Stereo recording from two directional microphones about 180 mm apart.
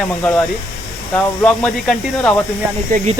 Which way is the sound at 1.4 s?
5° left (ahead or behind).